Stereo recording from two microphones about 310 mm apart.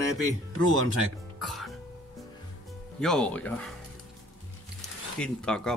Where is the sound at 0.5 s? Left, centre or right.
Right.